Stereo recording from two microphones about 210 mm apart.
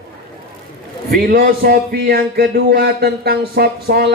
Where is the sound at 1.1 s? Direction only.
45° right (ahead or behind).